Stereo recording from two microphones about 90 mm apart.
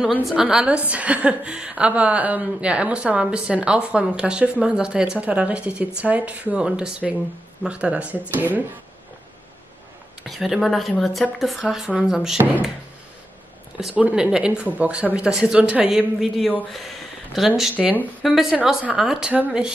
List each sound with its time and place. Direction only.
0.3 s a woman's voice: 5° right (ahead or behind)
10.2 s a woman's voice: centre (ahead or behind)
13.9 s a woman's voice: 10° right (ahead or behind)
17.6 s a woman's voice: 15° right (ahead or behind)
18.2 s a woman's voice: centre (ahead or behind)